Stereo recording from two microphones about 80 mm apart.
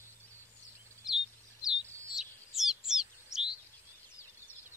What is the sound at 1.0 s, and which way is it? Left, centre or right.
Bird, centre.